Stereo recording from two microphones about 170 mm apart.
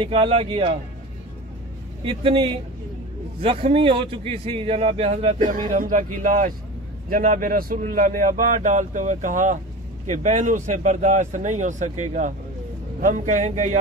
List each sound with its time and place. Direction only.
0.0 s a man's voice: 35° right (ahead or behind)
2.0 s a man's voice: 30° right (ahead or behind)
5.4 s speech: 50° right (ahead or behind)